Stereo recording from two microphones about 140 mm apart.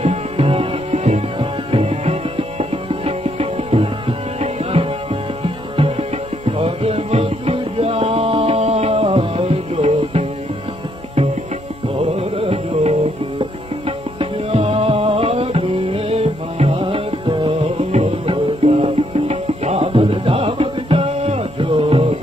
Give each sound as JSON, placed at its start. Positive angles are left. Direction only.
{"t": 0.0, "sound": "music", "side_deg": -45}
{"t": 11.9, "sound": "music", "side_deg": -45}